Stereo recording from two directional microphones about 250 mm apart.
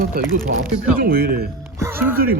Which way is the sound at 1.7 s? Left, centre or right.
Centre.